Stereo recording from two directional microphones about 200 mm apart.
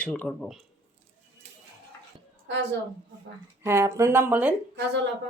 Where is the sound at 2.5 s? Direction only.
65° right (ahead or behind).